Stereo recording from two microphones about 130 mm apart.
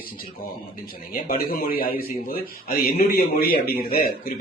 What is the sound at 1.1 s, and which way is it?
A man's voice, 90° left.